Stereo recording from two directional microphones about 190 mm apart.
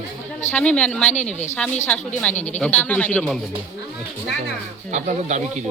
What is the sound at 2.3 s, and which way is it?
Speech, 40° left (ahead or behind).